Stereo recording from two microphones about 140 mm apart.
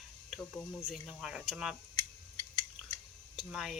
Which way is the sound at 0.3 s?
5° left (ahead or behind).